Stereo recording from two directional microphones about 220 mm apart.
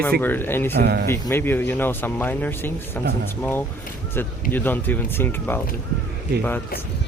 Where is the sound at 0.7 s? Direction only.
45° right (ahead or behind).